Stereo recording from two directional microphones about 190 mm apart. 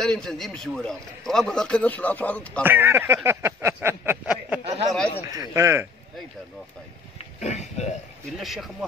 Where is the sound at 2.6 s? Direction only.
10° right (ahead or behind).